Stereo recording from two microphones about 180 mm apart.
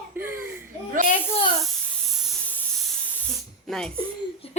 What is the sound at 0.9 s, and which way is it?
Speech, 45° right (ahead or behind).